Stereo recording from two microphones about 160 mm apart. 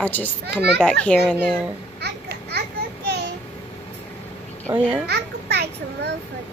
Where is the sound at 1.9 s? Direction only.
90° right.